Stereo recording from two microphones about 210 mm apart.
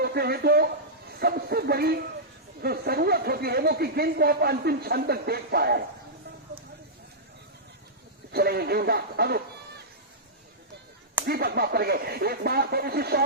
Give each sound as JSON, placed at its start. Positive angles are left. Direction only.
{"t": 0.0, "sound": "a man's voice", "side_deg": -50}
{"t": 8.3, "sound": "speech", "side_deg": -50}
{"t": 11.3, "sound": "speech", "side_deg": -50}